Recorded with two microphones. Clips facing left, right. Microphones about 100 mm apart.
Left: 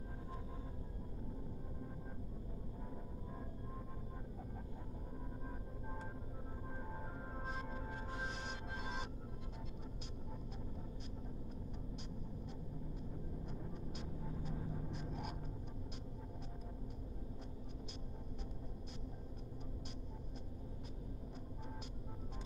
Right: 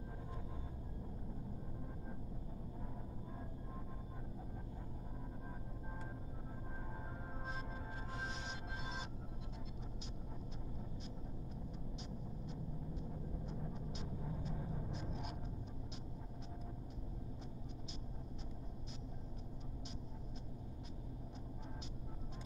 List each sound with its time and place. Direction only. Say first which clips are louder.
13.9 s vehicle: right 1 dB; 55° left (ahead or behind)